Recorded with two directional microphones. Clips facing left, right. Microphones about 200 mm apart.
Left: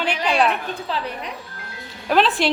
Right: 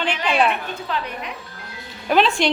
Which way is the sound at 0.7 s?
35° left (ahead or behind).